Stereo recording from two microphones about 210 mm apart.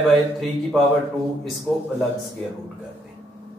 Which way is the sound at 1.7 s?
Centre (ahead or behind).